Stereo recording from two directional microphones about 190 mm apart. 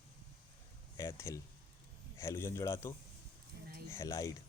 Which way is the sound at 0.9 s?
15° left (ahead or behind).